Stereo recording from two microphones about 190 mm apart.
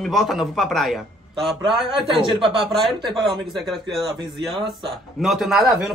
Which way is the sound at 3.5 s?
Centre (ahead or behind).